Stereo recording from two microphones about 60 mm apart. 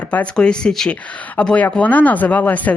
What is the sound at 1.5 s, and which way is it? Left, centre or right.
Speech, left.